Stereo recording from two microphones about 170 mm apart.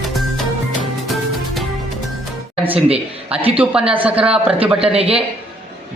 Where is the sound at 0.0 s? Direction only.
Centre (ahead or behind).